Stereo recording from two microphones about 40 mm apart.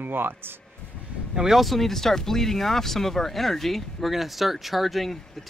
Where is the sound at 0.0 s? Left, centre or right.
Right.